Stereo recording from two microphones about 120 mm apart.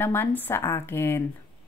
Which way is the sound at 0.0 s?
15° left (ahead or behind).